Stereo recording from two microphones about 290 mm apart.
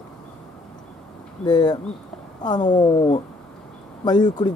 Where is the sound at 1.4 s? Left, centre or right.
Centre.